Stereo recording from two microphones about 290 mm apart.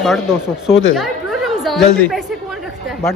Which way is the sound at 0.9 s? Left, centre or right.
Centre.